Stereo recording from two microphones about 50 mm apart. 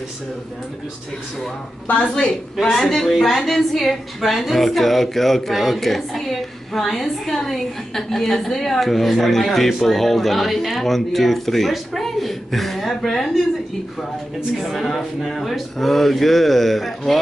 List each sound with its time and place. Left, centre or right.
1.9 s a woman's voice: left; by 13.4 s centre
14.6 s a woman's voice: centre